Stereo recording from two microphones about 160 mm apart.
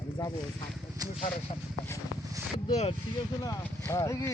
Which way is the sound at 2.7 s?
40° left (ahead or behind).